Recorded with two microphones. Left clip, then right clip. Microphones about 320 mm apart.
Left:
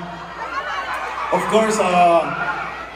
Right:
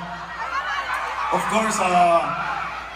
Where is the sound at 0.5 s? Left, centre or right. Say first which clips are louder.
Left 1 dB; centre.